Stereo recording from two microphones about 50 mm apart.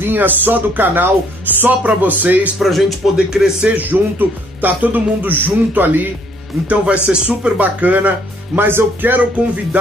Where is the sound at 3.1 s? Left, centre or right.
Centre.